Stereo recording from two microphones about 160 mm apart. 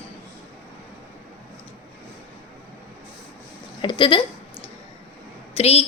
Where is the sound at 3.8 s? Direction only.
30° left (ahead or behind).